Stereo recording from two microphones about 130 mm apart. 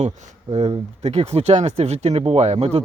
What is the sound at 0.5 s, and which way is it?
Speech, 50° right (ahead or behind).